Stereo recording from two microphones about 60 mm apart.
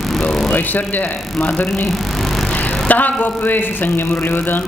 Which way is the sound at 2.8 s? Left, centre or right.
Left.